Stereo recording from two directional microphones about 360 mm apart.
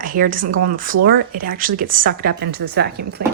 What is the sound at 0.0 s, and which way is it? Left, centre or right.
A woman's voice, right.